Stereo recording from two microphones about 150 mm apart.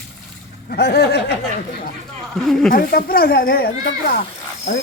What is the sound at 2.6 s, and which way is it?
Speech, 75° left (ahead or behind).